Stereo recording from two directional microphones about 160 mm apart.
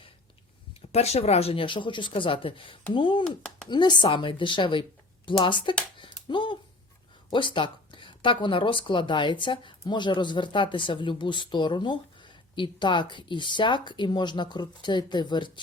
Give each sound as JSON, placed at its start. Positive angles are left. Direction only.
{"t": 0.9, "sound": "speech", "side_deg": 40}
{"t": 3.2, "sound": "speech", "side_deg": 5}
{"t": 3.7, "sound": "speech", "side_deg": 30}
{"t": 6.0, "sound": "a sound", "side_deg": 30}
{"t": 7.3, "sound": "speech", "side_deg": 30}